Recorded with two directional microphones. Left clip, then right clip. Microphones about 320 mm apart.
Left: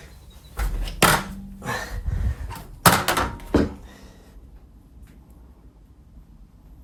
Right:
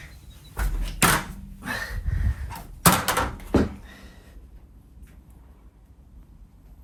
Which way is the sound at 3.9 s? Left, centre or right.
Centre.